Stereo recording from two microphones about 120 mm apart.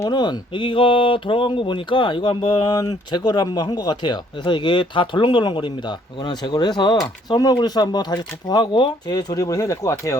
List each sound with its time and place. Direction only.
0.1 s speech: 40° left (ahead or behind)